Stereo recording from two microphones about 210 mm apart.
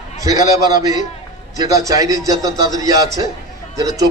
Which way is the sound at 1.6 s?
15° right (ahead or behind).